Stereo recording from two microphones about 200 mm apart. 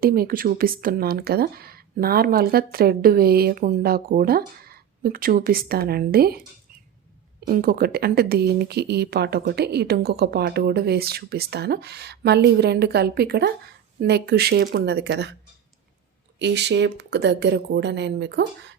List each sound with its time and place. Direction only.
0.0 s speech: 45° right (ahead or behind)
7.4 s speech: 45° right (ahead or behind)
16.4 s speech: 60° right (ahead or behind)